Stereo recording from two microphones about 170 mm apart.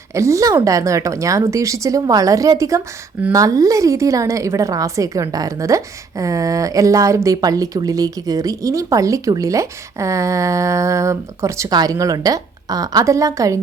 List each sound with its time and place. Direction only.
0.1 s a woman's voice: 15° right (ahead or behind)